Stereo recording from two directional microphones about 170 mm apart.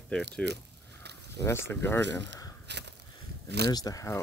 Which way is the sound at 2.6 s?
85° right.